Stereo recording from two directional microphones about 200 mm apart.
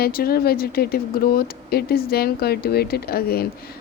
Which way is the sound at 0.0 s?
50° left (ahead or behind).